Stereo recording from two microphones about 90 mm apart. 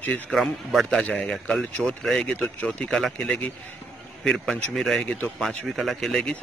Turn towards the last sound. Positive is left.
turn(degrees=0)  # may be behind; listen again after turning